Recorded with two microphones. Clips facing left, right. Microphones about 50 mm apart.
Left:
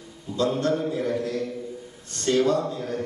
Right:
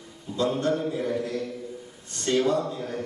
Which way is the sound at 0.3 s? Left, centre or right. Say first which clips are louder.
Left 2 dB; centre.